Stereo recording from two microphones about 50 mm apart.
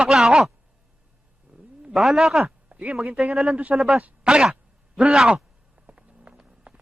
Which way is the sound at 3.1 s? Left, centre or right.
Right.